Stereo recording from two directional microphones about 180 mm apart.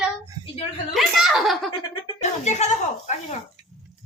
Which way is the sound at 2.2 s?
40° left (ahead or behind).